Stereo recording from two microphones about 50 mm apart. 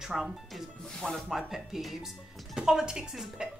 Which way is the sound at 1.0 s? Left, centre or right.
Centre.